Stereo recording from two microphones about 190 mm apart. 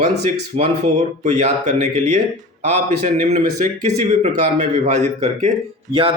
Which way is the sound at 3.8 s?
40° right (ahead or behind).